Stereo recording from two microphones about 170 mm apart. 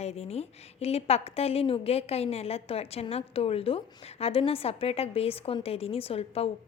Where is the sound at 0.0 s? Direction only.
35° left (ahead or behind).